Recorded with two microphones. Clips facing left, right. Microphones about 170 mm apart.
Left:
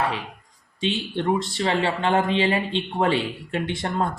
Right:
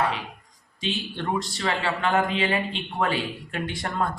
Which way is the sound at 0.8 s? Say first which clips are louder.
Left 5 dB; 25° left (ahead or behind).